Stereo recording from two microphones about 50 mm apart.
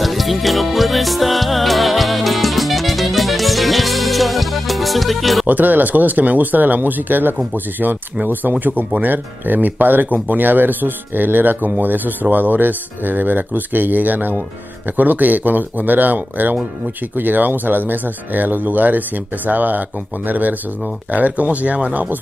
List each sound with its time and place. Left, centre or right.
0.0 s music: centre
5.5 s speech: right